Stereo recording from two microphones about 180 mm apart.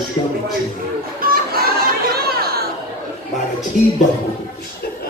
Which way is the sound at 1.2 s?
55° right (ahead or behind).